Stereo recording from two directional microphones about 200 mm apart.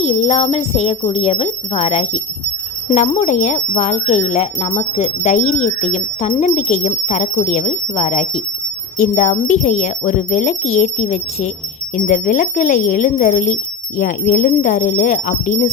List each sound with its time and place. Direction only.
0.0 s speech: 30° left (ahead or behind)